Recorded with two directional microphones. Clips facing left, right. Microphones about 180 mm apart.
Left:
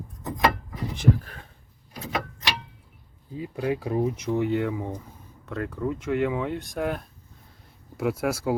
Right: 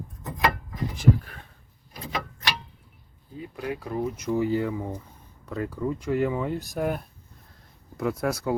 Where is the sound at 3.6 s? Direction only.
25° left (ahead or behind).